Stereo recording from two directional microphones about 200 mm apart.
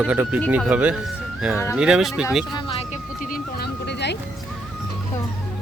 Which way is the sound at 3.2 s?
45° left (ahead or behind).